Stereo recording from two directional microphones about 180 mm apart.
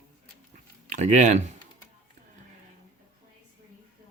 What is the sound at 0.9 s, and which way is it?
Speech, 40° right (ahead or behind).